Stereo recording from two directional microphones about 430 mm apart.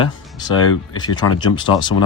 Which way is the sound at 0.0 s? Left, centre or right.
Centre.